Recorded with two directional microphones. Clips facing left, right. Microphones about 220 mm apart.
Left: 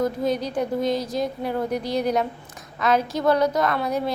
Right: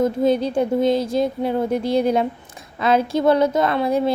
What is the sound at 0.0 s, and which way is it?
A woman's voice, 25° right (ahead or behind).